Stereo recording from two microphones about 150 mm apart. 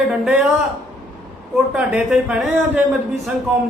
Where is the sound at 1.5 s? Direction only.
5° right (ahead or behind).